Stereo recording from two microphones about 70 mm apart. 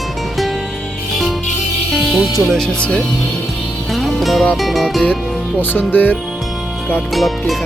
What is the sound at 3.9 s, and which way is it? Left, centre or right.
Music, centre.